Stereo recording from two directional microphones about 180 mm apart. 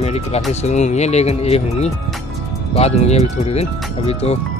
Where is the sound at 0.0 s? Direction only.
35° left (ahead or behind).